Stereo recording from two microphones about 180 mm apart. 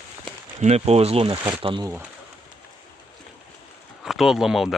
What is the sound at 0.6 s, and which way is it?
Speech, 35° right (ahead or behind).